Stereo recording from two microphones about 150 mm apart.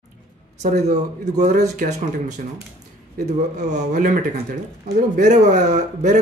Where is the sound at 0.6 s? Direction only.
50° right (ahead or behind).